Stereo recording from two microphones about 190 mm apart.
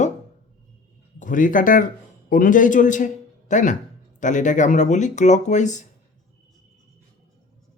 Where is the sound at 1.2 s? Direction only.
45° left (ahead or behind).